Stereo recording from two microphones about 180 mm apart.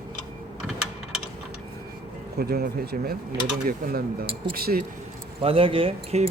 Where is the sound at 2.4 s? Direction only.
60° right (ahead or behind).